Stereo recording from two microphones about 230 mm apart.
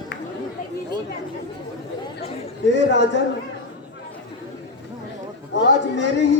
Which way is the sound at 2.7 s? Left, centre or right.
Left.